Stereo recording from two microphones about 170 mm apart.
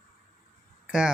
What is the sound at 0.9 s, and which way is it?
Speech, 5° right (ahead or behind).